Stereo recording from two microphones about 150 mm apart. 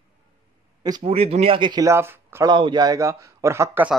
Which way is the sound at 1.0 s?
45° right (ahead or behind).